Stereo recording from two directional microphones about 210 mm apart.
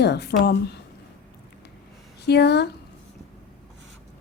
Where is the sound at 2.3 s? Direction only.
50° left (ahead or behind).